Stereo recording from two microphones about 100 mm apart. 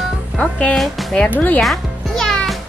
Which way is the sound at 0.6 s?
5° left (ahead or behind).